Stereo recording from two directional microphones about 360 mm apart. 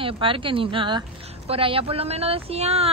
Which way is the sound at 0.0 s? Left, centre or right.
Centre.